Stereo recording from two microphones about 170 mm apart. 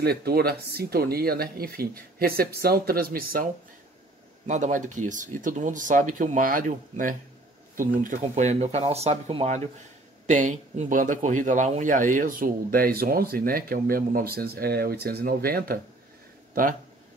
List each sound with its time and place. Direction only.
0.0 s speech: 65° right (ahead or behind)
4.5 s speech: 45° right (ahead or behind)
10.2 s speech: 45° right (ahead or behind)